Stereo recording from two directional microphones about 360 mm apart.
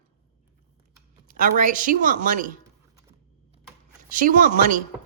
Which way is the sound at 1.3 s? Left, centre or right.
Right.